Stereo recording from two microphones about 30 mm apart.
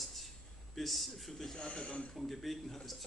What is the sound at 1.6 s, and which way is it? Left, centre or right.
Speech, left.